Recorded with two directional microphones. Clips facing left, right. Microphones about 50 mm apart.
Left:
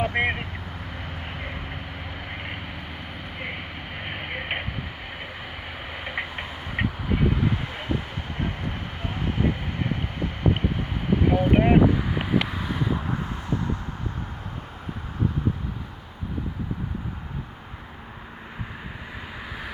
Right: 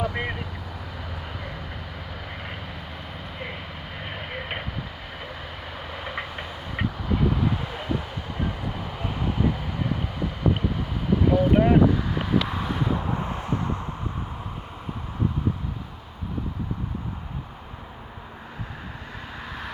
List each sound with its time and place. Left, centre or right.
0.0 s vehicle: left
3.3 s a sound: left
5.9 s vehicle: left
7.4 s vehicle: left
8.4 s vehicle: left
12.5 s vehicle: centre
13.1 s a sound: right
19.5 s vehicle: centre